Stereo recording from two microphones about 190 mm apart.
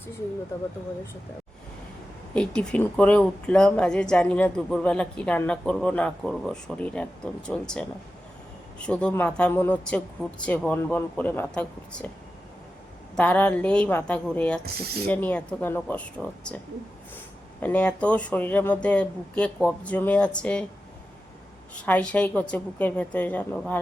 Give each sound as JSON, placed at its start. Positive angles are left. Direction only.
{"t": 2.3, "sound": "speech", "side_deg": 5}
{"t": 13.1, "sound": "speech", "side_deg": 5}
{"t": 14.6, "sound": "speech", "side_deg": -55}
{"t": 15.0, "sound": "speech", "side_deg": 10}
{"t": 17.6, "sound": "speech", "side_deg": 10}
{"t": 21.8, "sound": "speech", "side_deg": 5}